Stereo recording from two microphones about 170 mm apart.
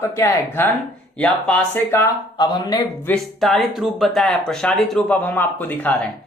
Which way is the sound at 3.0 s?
5° left (ahead or behind).